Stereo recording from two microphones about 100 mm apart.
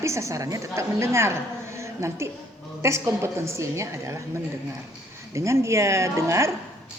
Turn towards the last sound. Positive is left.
turn(degrees=-30)  # may be behind; listen again after turning